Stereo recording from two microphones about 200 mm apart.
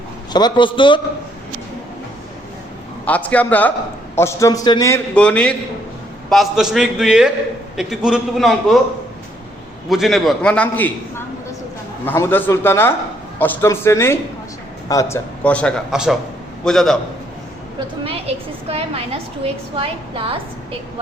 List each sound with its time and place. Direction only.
0.3 s a man's voice: 20° left (ahead or behind)
3.1 s speech: 5° left (ahead or behind)
5.1 s a man's voice: 5° left (ahead or behind)
9.9 s a man's voice: centre (ahead or behind)
12.0 s a man's voice: 10° left (ahead or behind)
18.0 s a sound: 30° right (ahead or behind)
19.7 s a woman's voice: 25° right (ahead or behind)